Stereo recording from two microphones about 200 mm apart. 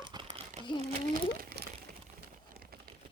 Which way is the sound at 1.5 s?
45° right (ahead or behind).